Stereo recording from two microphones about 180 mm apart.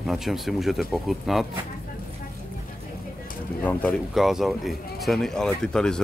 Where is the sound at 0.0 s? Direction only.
Centre (ahead or behind).